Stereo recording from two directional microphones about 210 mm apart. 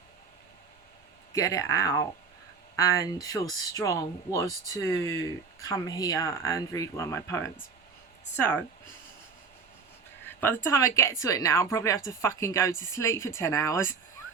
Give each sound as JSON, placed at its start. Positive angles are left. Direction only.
{"t": 1.3, "sound": "speech", "side_deg": 15}
{"t": 10.2, "sound": "speech", "side_deg": 10}